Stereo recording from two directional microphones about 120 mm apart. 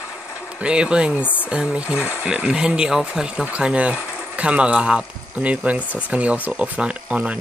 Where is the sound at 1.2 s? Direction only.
15° left (ahead or behind).